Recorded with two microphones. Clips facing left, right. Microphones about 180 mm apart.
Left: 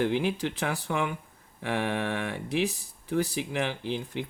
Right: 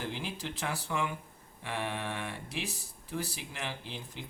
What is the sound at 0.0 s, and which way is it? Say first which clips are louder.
Speech: left 12 dB; 65° left (ahead or behind).